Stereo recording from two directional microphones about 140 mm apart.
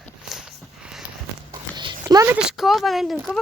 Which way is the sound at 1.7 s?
30° right (ahead or behind).